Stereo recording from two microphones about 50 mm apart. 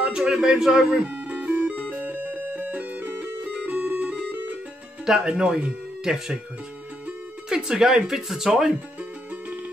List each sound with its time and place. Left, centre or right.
0.0 s music: right
5.0 s speech: centre
7.4 s speech: centre